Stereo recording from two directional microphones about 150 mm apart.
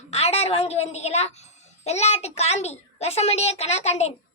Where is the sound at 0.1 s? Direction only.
45° left (ahead or behind).